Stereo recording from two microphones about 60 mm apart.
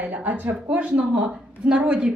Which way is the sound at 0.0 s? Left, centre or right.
Right.